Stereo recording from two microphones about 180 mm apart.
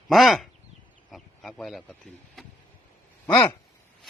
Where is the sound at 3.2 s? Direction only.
15° left (ahead or behind).